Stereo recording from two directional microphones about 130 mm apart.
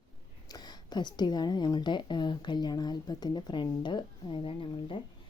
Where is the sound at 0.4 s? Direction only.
30° left (ahead or behind).